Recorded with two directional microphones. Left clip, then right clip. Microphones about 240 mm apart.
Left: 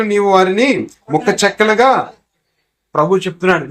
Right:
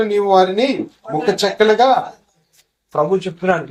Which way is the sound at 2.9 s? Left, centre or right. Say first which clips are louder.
Left 3 dB; left.